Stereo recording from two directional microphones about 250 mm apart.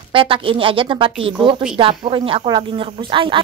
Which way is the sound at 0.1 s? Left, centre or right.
Right.